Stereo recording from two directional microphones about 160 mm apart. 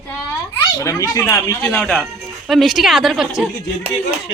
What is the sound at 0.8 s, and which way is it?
A woman's voice, 20° left (ahead or behind).